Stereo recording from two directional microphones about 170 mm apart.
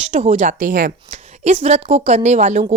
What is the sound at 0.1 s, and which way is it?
A woman's voice, 45° right (ahead or behind).